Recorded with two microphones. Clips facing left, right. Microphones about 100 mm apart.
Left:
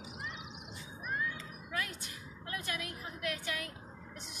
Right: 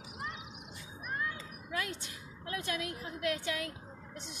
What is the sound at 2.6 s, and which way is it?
A woman's voice, 25° right (ahead or behind).